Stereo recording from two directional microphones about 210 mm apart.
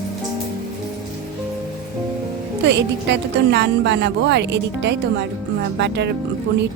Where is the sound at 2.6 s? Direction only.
55° right (ahead or behind).